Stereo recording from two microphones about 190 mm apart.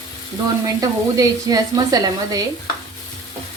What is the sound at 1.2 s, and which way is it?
Speech, 20° right (ahead or behind).